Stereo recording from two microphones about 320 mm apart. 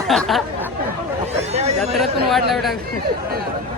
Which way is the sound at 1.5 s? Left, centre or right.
Centre.